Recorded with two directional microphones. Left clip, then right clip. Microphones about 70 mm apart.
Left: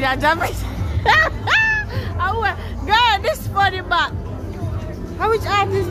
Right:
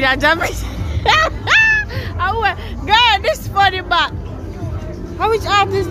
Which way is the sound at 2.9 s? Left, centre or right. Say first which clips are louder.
Right 3 dB; centre.